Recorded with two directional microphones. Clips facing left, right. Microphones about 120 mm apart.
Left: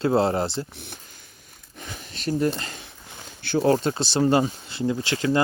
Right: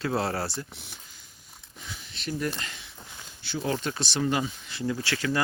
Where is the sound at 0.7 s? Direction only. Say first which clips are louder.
Left 6 dB; 55° left (ahead or behind).